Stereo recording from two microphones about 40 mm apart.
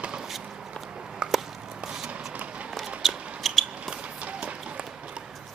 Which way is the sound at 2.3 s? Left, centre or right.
Right.